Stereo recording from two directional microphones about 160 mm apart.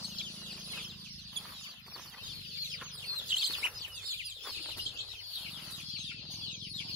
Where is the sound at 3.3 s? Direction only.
5° right (ahead or behind).